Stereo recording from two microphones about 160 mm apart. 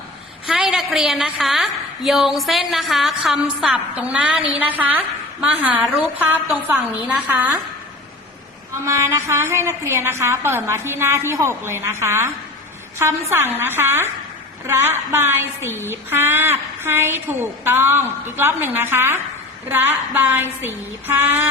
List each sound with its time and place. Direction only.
0.4 s a woman's voice: 5° right (ahead or behind)
8.8 s a woman's voice: 15° right (ahead or behind)
13.6 s a woman's voice: 15° right (ahead or behind)